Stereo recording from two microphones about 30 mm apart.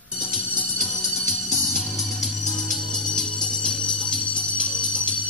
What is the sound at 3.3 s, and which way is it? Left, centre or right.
Music, left.